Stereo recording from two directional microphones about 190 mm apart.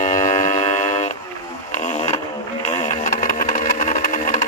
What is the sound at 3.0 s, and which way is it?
Sewing machine, 45° left (ahead or behind).